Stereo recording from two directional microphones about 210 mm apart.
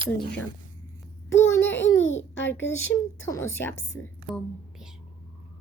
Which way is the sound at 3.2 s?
10° left (ahead or behind).